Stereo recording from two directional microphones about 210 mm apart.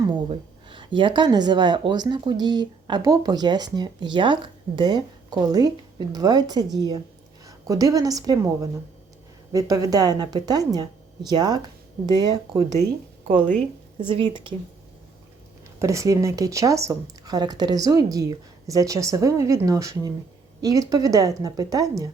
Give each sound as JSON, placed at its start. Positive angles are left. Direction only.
{"t": 0.0, "sound": "a woman's voice", "side_deg": -20}
{"t": 14.0, "sound": "speech", "side_deg": -25}
{"t": 15.8, "sound": "speech", "side_deg": -15}